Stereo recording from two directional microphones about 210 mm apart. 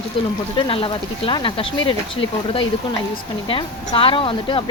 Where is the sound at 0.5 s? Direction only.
25° left (ahead or behind).